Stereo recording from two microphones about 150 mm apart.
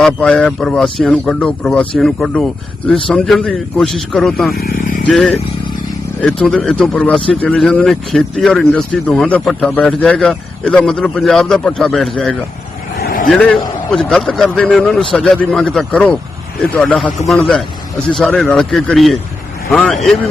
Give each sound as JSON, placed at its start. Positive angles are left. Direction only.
{"t": 0.0, "sound": "speech", "side_deg": 5}
{"t": 4.5, "sound": "vehicle", "side_deg": 85}
{"t": 5.0, "sound": "speech", "side_deg": 5}
{"t": 13.0, "sound": "vehicle", "side_deg": 80}
{"t": 13.2, "sound": "speech", "side_deg": 5}